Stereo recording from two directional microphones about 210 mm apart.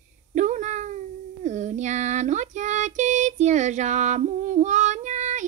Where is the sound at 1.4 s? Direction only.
35° right (ahead or behind).